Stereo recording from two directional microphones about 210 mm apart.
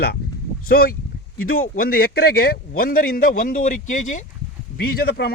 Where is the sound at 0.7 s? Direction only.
45° left (ahead or behind).